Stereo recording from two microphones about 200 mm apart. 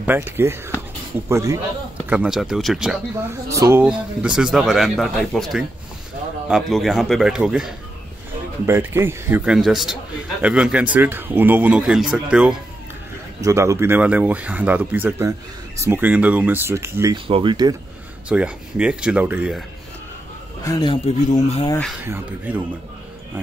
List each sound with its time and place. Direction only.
0.0 s speech: 10° right (ahead or behind)
2.0 s speech: 5° right (ahead or behind)
3.3 s speech: 15° right (ahead or behind)
13.4 s speech: 15° right (ahead or behind)
17.3 s speech: 25° right (ahead or behind)
18.3 s speech: 5° right (ahead or behind)
20.6 s speech: 20° left (ahead or behind)
22.0 s speech: 10° right (ahead or behind)